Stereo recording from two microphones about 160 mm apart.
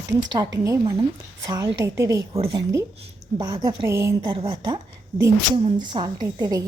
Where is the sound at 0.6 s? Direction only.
20° right (ahead or behind).